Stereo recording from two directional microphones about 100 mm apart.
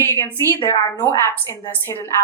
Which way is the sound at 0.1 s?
25° left (ahead or behind).